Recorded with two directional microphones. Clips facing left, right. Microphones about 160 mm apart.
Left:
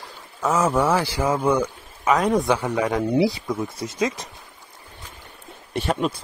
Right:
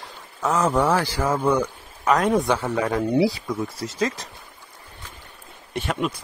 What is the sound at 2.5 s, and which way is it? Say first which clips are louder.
Speech: left 1 dB; 10° left (ahead or behind).